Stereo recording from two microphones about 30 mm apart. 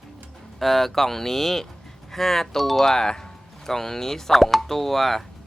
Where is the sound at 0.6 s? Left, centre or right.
Centre.